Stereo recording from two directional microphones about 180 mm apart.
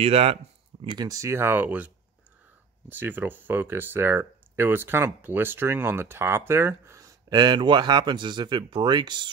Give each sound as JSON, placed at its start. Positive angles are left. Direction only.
{"t": 0.0, "sound": "speech", "side_deg": -35}
{"t": 0.8, "sound": "speech", "side_deg": -20}
{"t": 2.9, "sound": "speech", "side_deg": -10}